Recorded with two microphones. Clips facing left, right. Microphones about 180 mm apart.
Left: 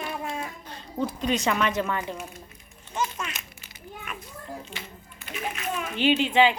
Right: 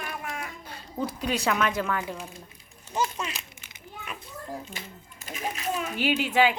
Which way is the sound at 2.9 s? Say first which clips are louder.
Right 1 dB; 35° right (ahead or behind).